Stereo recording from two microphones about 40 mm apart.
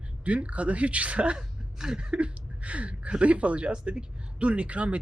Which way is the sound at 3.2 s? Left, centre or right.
Right.